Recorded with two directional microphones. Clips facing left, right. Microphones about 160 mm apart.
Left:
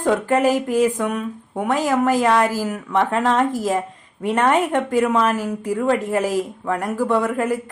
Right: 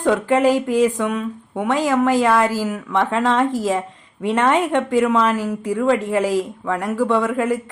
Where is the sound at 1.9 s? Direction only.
10° left (ahead or behind).